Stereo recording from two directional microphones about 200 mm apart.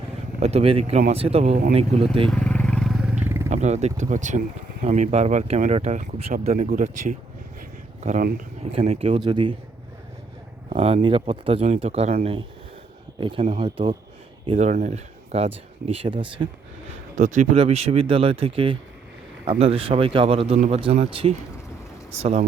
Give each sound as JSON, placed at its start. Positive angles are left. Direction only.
{"t": 0.3, "sound": "speech", "side_deg": -30}
{"t": 2.3, "sound": "vehicle", "side_deg": 5}
{"t": 3.5, "sound": "speech", "side_deg": -35}
{"t": 10.7, "sound": "speech", "side_deg": -30}
{"t": 13.1, "sound": "speech", "side_deg": -25}
{"t": 14.5, "sound": "speech", "side_deg": -35}
{"t": 17.2, "sound": "speech", "side_deg": -40}